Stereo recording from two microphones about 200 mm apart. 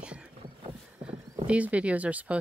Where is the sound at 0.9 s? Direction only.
10° right (ahead or behind).